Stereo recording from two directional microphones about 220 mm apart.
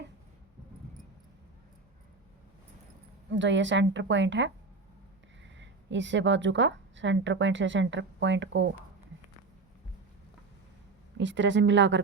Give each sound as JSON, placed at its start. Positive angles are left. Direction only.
{"t": 3.3, "sound": "a woman's voice", "side_deg": -55}
{"t": 5.5, "sound": "a woman's voice", "side_deg": -55}
{"t": 11.2, "sound": "a woman's voice", "side_deg": -55}